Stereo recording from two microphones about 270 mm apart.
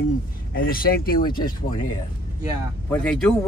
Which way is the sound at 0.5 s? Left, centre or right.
Left.